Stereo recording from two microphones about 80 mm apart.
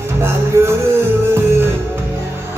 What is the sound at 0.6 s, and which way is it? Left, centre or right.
Music, right.